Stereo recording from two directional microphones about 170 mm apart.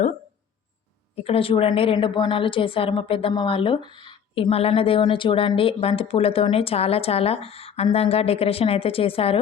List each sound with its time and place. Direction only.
1.1 s a woman's voice: 35° left (ahead or behind)